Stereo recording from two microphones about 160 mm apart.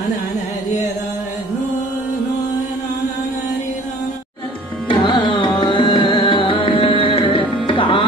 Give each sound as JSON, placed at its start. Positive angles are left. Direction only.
{"t": 4.8, "sound": "music", "side_deg": 30}